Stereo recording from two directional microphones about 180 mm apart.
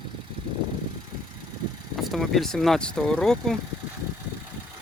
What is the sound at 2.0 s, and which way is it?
Speech, centre (ahead or behind).